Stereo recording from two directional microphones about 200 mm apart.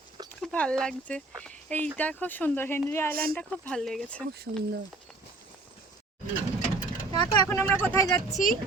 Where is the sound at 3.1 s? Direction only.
50° right (ahead or behind).